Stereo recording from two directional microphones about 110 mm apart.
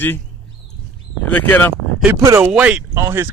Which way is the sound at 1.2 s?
15° left (ahead or behind).